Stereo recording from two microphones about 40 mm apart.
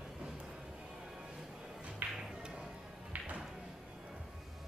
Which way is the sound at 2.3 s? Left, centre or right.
Right.